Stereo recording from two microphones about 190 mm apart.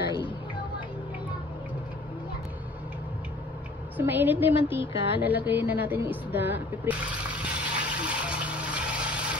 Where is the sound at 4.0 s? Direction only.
10° right (ahead or behind).